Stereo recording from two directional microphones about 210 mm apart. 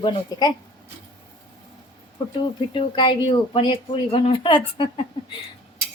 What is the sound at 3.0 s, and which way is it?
A woman's voice, 25° left (ahead or behind).